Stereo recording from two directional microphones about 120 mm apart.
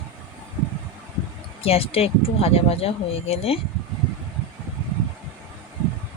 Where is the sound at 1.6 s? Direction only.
55° left (ahead or behind).